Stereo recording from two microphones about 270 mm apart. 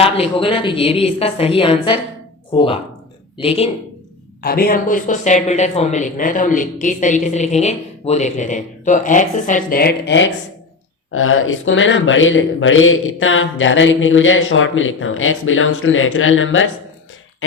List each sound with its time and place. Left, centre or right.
0.0 s speech: centre
4.4 s speech: left